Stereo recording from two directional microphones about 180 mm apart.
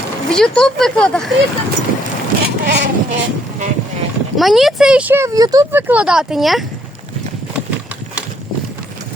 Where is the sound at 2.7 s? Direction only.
40° right (ahead or behind).